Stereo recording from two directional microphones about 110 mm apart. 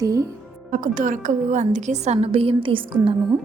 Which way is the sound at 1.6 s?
90° right.